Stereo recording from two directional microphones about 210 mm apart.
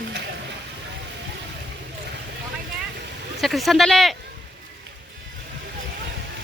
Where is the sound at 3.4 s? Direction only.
Centre (ahead or behind).